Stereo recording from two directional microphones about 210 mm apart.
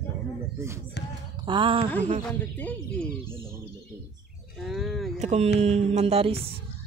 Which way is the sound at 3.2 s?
10° right (ahead or behind).